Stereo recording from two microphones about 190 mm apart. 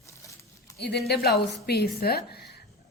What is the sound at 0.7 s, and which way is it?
A woman's voice, 60° left (ahead or behind).